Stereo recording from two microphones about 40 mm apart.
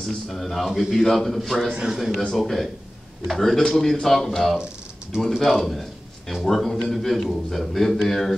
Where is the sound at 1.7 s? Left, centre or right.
Right.